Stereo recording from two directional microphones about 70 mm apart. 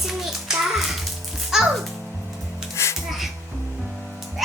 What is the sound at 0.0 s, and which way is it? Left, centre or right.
Music, centre.